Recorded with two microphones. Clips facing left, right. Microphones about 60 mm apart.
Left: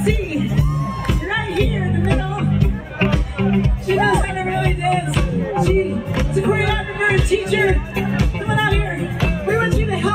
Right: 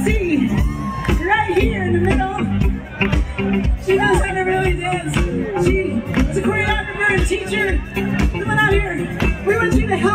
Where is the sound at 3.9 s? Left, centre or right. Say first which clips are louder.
Right 2 dB; centre.